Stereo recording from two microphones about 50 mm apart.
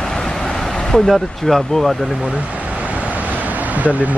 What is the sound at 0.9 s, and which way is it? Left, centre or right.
Speech, centre.